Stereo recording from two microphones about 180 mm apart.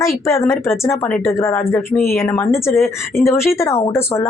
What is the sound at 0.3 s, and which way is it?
Speech, 15° left (ahead or behind).